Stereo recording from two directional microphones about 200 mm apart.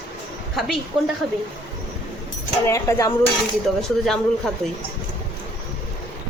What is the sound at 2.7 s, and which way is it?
Speech, 15° left (ahead or behind).